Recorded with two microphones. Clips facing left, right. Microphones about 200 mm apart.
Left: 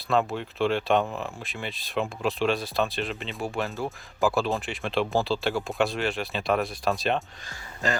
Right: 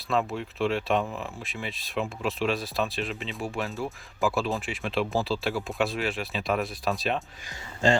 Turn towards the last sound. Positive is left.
turn(degrees=-30)  # may be behind; listen again after turning